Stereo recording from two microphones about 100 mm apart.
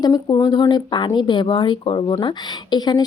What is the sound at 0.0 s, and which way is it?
Speech, 40° left (ahead or behind).